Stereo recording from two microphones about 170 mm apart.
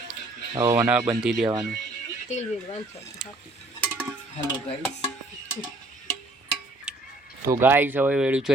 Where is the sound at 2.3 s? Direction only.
40° left (ahead or behind).